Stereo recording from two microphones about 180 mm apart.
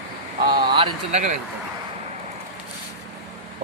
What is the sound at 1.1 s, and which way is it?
Speech, 40° right (ahead or behind).